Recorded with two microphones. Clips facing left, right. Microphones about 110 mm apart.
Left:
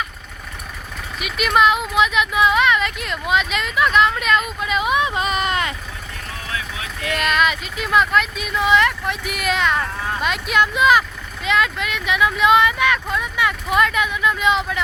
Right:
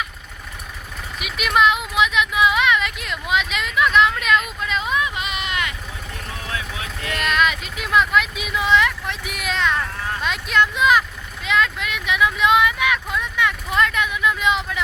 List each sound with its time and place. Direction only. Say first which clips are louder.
1.2 s speech: left 2 dB; centre (ahead or behind)
1.9 s a sound: left 2 dB; centre (ahead or behind)
4.9 s a sound: left 5 dB; 30° left (ahead or behind)
6.5 s vehicle: left 1 dB; 25° right (ahead or behind)
7.2 s vehicle: left 1 dB; centre (ahead or behind)
11.4 s speech: left 1 dB; centre (ahead or behind)